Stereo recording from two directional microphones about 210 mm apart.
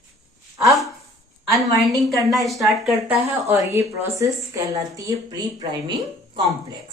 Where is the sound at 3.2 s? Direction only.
30° right (ahead or behind).